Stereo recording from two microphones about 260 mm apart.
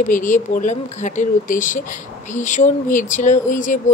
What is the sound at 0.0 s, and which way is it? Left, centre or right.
Speech, left.